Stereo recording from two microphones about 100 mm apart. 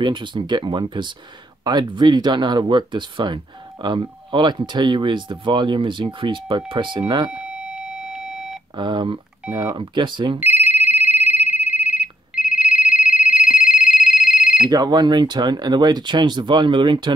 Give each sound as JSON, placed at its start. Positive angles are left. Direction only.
{"t": 0.0, "sound": "speech", "side_deg": -50}
{"t": 7.2, "sound": "beep", "side_deg": -10}
{"t": 8.7, "sound": "speech", "side_deg": -50}
{"t": 10.4, "sound": "telephone bell ringing", "side_deg": -20}
{"t": 14.7, "sound": "speech", "side_deg": -40}